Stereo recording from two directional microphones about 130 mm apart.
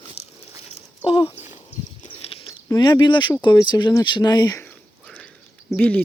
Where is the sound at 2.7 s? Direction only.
30° left (ahead or behind).